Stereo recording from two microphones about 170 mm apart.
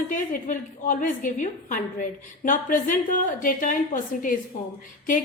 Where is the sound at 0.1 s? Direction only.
50° left (ahead or behind).